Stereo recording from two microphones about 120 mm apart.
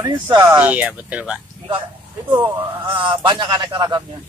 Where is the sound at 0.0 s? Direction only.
40° right (ahead or behind).